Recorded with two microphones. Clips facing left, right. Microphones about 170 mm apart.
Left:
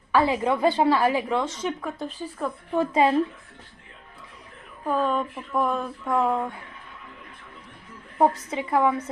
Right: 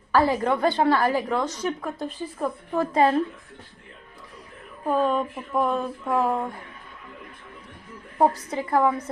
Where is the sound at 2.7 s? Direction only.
5° left (ahead or behind).